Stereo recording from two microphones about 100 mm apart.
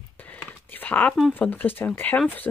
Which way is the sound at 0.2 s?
20° left (ahead or behind).